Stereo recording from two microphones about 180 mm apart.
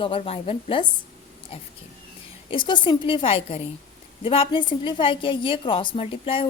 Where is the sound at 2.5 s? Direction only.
25° left (ahead or behind).